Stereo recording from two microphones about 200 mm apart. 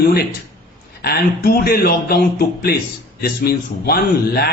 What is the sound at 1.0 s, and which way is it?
A man's voice, 50° left (ahead or behind).